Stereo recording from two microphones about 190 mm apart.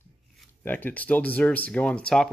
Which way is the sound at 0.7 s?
10° left (ahead or behind).